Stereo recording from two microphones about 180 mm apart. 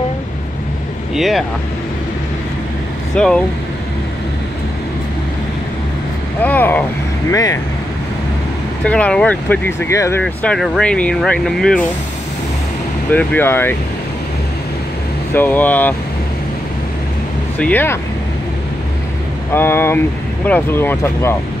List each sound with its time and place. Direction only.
1.1 s speech: centre (ahead or behind)
3.2 s speech: 5° left (ahead or behind)
6.4 s speech: 10° left (ahead or behind)
8.8 s speech: 5° left (ahead or behind)
10.2 s speech: 5° left (ahead or behind)
13.1 s speech: 10° left (ahead or behind)
15.3 s speech: 10° left (ahead or behind)
17.6 s speech: 10° left (ahead or behind)
19.5 s speech: 10° left (ahead or behind)